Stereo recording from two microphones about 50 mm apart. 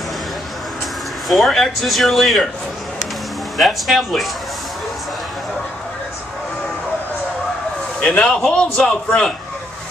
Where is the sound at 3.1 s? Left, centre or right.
Centre.